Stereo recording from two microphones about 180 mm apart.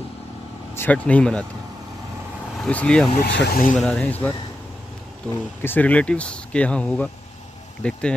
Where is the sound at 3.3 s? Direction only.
70° left (ahead or behind).